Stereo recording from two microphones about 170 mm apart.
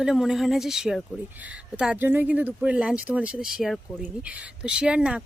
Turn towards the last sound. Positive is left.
turn(degrees=-5)  # may be behind; listen again after turning